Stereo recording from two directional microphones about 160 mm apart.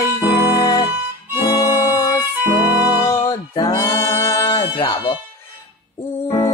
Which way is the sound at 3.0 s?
20° left (ahead or behind).